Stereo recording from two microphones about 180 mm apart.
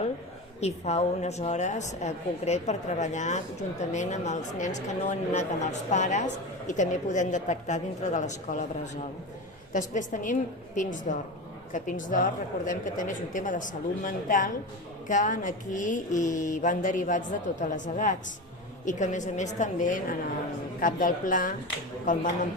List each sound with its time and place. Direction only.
0.6 s a woman's voice: 40° left (ahead or behind)
9.7 s speech: 45° left (ahead or behind)